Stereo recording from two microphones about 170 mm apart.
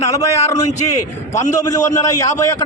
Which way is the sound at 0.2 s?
20° left (ahead or behind).